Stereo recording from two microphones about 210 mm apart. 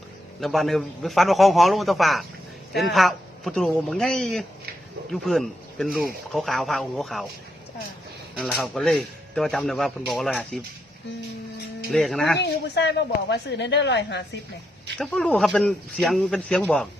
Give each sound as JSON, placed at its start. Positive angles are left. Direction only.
{"t": 0.3, "sound": "speech", "side_deg": 0}
{"t": 8.4, "sound": "speech", "side_deg": 0}
{"t": 11.9, "sound": "speech", "side_deg": 0}
{"t": 12.4, "sound": "a woman's voice", "side_deg": 55}
{"t": 14.9, "sound": "speech", "side_deg": 0}